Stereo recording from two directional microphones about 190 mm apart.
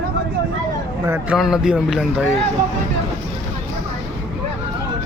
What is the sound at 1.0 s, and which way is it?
A man's voice, 10° right (ahead or behind).